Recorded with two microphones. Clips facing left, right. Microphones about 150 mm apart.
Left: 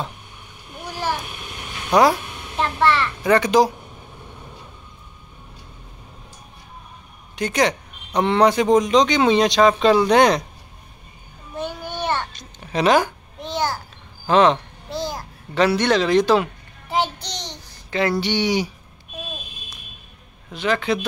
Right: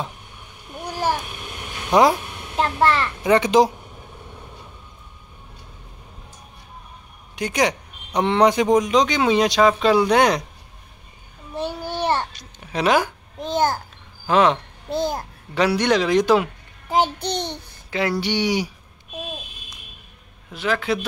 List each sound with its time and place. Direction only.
2.5 s a sound: 40° right (ahead or behind)
3.3 s speech: 20° right (ahead or behind)
7.3 s speech: 10° right (ahead or behind)
11.5 s a sound: 35° right (ahead or behind)
12.3 s a sound: 10° right (ahead or behind)
13.4 s a child's voice: 45° right (ahead or behind)
14.2 s speech: 5° right (ahead or behind)
14.9 s a child's voice: 55° right (ahead or behind)
15.5 s speech: 10° right (ahead or behind)
16.9 s child singing: 50° right (ahead or behind)
18.2 s speech: 10° right (ahead or behind)
20.5 s speech: 5° right (ahead or behind)